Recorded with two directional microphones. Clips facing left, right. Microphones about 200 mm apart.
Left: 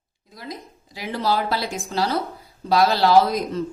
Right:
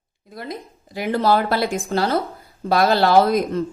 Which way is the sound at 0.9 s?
55° right (ahead or behind).